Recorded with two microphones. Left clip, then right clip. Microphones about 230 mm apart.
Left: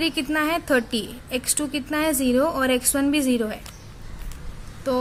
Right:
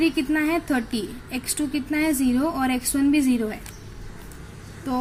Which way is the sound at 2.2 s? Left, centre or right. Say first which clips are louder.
Left 3 dB; left.